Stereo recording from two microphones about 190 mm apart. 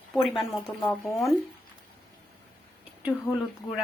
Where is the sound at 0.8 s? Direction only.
15° left (ahead or behind).